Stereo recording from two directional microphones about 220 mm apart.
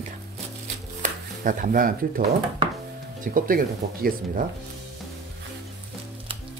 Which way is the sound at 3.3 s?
40° right (ahead or behind).